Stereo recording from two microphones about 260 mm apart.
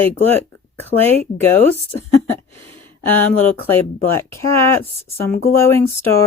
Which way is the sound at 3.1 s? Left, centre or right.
Centre.